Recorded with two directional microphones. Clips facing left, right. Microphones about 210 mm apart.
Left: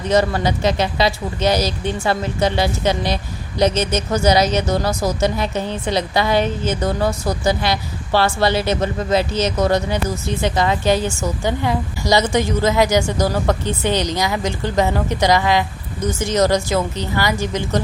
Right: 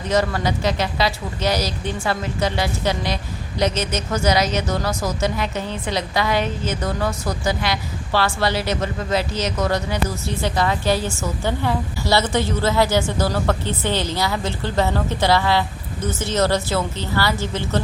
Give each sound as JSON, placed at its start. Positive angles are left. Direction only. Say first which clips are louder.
{"t": 0.1, "sound": "speech", "louder": "left 3 dB", "side_deg": 25}
{"t": 4.1, "sound": "a woman's voice", "louder": "left 4 dB", "side_deg": 30}